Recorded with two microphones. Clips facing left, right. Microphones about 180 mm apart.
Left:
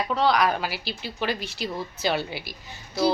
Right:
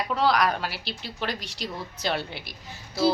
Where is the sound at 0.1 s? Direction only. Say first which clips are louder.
Left 1 dB; centre (ahead or behind).